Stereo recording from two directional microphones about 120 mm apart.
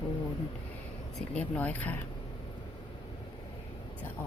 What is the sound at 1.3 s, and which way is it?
Speech, 10° left (ahead or behind).